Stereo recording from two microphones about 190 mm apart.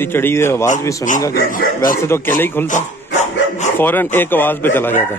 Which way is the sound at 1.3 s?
50° left (ahead or behind).